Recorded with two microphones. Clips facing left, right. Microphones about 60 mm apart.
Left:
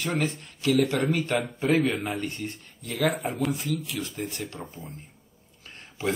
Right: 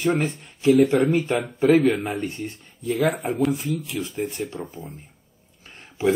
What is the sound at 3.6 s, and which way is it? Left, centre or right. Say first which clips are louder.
Speech: right 3 dB; left.